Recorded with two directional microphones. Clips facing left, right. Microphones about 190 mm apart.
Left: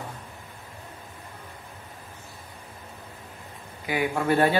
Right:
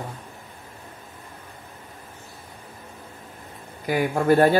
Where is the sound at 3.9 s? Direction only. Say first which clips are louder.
Right 5 dB; 40° right (ahead or behind).